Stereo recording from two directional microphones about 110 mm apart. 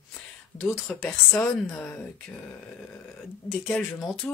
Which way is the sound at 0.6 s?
Centre (ahead or behind).